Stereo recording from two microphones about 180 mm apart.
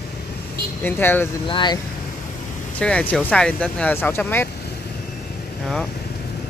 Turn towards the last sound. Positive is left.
turn(degrees=0)  # may be behind; listen again after turning